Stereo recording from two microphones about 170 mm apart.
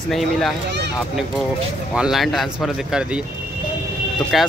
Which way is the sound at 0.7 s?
90° right.